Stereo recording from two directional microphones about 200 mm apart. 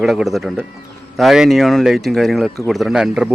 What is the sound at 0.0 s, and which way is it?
Speech, centre (ahead or behind).